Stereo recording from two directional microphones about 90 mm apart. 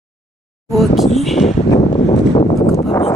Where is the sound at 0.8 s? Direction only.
Centre (ahead or behind).